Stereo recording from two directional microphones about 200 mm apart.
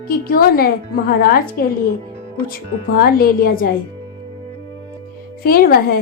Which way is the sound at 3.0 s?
50° left (ahead or behind).